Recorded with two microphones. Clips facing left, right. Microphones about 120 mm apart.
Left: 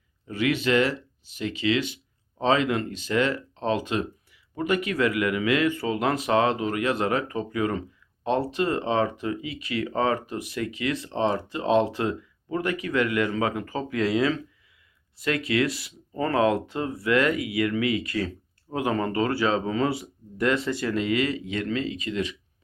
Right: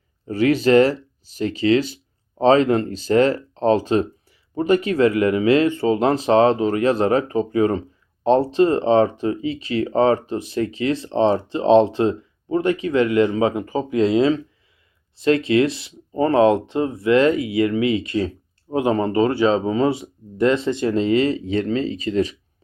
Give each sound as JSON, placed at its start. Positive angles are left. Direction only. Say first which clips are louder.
{"t": 0.3, "sound": "speech", "louder": "right 8 dB", "side_deg": -35}